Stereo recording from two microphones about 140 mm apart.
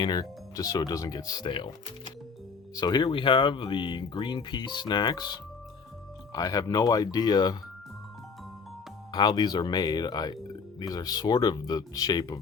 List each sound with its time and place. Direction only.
0.0 s speech: 30° left (ahead or behind)
2.7 s speech: 30° left (ahead or behind)
9.1 s speech: 30° left (ahead or behind)